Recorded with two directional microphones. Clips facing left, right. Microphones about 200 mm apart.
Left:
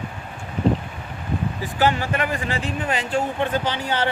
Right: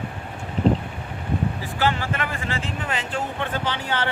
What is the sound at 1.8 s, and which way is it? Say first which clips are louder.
Speech: left 3 dB; 15° left (ahead or behind).